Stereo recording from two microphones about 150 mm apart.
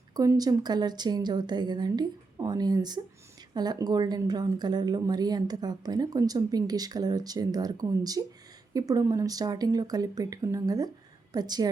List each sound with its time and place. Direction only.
0.1 s a woman's voice: 25° right (ahead or behind)